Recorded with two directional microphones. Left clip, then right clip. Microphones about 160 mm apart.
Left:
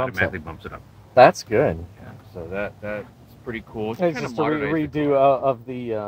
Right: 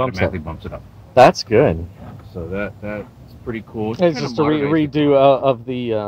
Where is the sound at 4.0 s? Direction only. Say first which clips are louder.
Right 6 dB; 10° left (ahead or behind).